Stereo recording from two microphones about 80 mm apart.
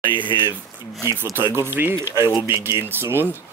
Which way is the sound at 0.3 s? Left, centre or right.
Left.